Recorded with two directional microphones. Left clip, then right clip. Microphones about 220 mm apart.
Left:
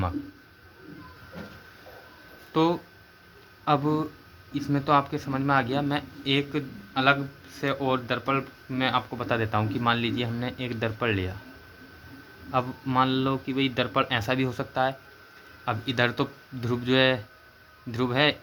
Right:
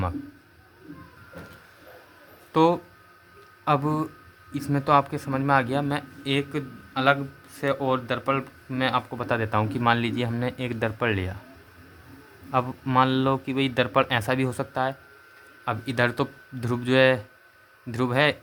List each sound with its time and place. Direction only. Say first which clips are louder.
2.5 s speech: right 4 dB; 30° right (ahead or behind)
12.5 s speech: right 2 dB; 25° right (ahead or behind)